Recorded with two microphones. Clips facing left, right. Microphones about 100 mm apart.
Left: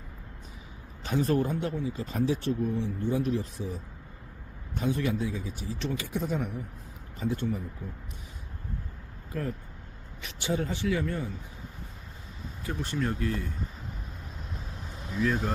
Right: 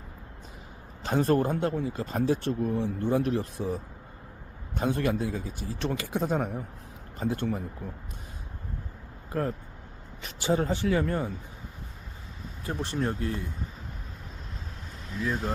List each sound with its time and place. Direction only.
1.0 s speech: 50° right (ahead or behind)
9.3 s speech: 40° right (ahead or behind)
12.6 s speech: 30° right (ahead or behind)